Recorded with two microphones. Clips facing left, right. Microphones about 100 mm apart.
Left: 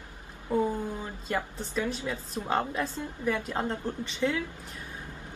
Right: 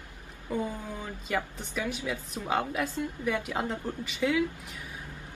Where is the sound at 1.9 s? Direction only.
35° left (ahead or behind).